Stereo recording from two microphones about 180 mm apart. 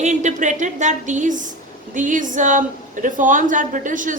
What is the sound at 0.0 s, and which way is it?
A woman's voice, 40° right (ahead or behind).